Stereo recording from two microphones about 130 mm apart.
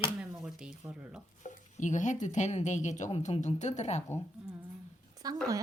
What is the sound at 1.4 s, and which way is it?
Speech, 70° left (ahead or behind).